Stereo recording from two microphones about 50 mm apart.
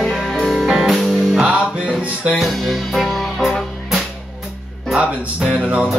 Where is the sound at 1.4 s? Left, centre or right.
Right.